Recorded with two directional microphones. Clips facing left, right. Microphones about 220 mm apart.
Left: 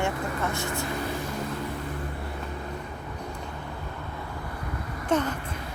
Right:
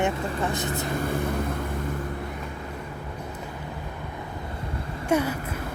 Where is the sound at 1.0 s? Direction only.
55° right (ahead or behind).